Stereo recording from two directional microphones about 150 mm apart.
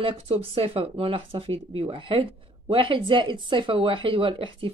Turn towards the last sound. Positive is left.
turn(degrees=-35)  # may be behind; listen again after turning